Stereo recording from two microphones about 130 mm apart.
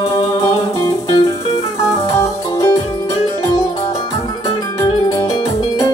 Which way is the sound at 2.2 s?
30° left (ahead or behind).